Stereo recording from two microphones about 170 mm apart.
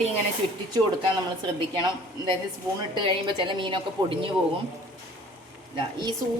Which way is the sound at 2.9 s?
30° right (ahead or behind).